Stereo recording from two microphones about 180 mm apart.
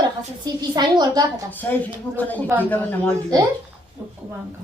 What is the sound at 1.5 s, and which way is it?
Speech, 10° left (ahead or behind).